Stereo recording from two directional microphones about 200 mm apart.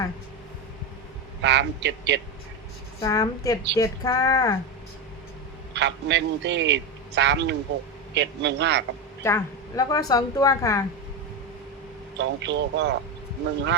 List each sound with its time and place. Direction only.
1.4 s a man's voice: 60° right (ahead or behind)
3.0 s speech: 15° left (ahead or behind)
5.7 s a man's voice: 60° right (ahead or behind)
9.2 s speech: 15° left (ahead or behind)
12.1 s a man's voice: 65° right (ahead or behind)